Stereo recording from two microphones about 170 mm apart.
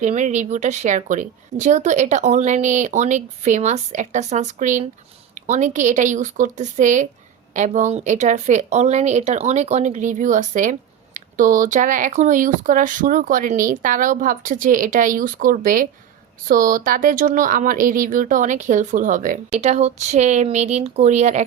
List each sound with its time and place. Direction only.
0.0 s a woman's voice: 45° right (ahead or behind)